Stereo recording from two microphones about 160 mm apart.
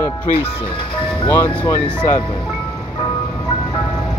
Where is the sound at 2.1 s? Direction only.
30° left (ahead or behind).